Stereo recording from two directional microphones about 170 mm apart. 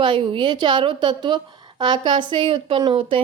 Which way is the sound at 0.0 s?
30° right (ahead or behind).